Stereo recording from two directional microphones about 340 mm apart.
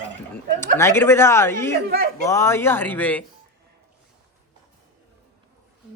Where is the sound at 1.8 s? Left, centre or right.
Right.